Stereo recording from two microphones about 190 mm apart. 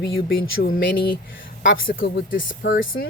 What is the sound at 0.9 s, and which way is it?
Speech, 25° left (ahead or behind).